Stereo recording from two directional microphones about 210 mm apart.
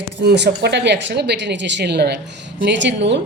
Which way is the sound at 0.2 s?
55° right (ahead or behind).